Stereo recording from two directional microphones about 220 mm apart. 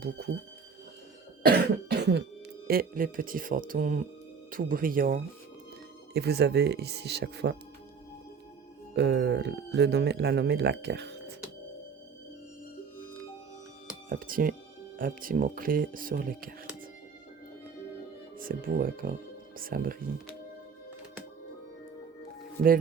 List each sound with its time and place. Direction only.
1.4 s cough: 45° right (ahead or behind)
2.6 s speech: 40° right (ahead or behind)
9.0 s speech: 50° right (ahead or behind)
14.1 s speech: 40° right (ahead or behind)
18.3 s speech: 40° right (ahead or behind)
22.6 s speech: 35° right (ahead or behind)